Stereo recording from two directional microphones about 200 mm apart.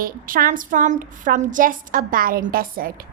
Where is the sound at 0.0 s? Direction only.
45° right (ahead or behind).